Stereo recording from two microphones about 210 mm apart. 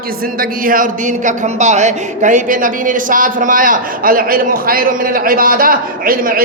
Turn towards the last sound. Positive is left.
turn(degrees=-45)  # may be behind; listen again after turning